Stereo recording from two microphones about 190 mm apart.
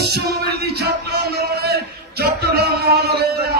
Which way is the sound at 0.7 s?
55° right (ahead or behind).